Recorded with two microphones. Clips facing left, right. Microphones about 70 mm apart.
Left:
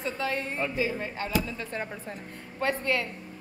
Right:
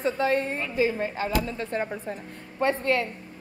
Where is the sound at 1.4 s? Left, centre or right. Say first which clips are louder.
Right 4 dB; right.